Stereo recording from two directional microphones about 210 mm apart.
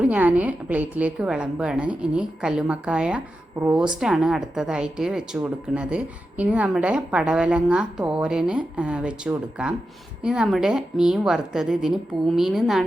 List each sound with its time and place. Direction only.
0.0 s speech: 5° right (ahead or behind)